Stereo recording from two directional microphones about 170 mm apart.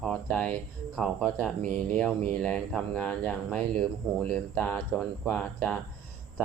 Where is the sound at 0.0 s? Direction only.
5° left (ahead or behind).